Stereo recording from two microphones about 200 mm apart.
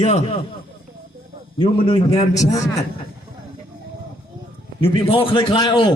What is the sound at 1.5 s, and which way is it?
Speech, 25° left (ahead or behind).